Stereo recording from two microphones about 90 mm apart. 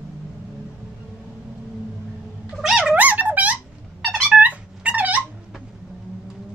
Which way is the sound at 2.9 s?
20° right (ahead or behind).